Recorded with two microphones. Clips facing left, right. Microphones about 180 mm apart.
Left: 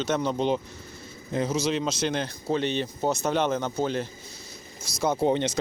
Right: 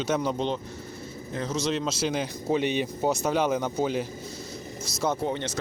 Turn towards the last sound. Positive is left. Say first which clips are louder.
# left 6 dB
turn(degrees=20)  # may be behind; listen again after turning